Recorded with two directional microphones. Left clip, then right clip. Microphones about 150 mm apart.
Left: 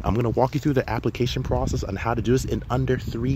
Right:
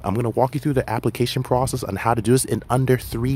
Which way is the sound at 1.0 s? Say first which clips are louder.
Right 3 dB; 30° right (ahead or behind).